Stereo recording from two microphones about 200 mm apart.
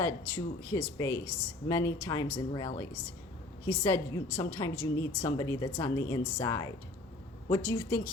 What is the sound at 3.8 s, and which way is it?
A woman's voice, 15° left (ahead or behind).